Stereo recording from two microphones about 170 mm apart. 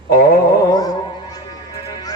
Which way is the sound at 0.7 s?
20° left (ahead or behind).